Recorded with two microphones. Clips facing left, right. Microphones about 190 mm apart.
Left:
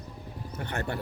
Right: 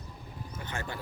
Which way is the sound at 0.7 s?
65° left (ahead or behind).